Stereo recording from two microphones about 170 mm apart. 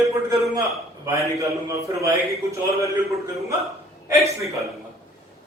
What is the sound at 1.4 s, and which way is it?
Speech, 20° right (ahead or behind).